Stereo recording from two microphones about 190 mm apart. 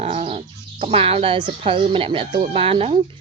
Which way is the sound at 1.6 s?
30° right (ahead or behind).